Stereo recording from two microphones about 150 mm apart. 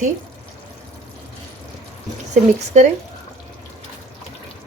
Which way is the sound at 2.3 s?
50° right (ahead or behind).